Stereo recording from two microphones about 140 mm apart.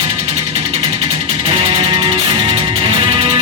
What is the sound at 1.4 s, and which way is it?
Music, 40° right (ahead or behind).